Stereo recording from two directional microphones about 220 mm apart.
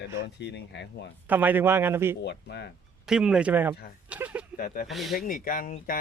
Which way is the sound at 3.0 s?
5° right (ahead or behind).